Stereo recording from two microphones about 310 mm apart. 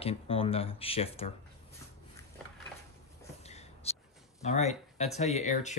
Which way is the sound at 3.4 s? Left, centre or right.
Left.